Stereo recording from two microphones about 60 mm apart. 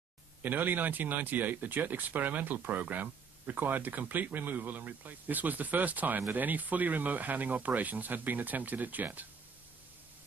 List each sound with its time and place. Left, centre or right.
0.4 s speech: right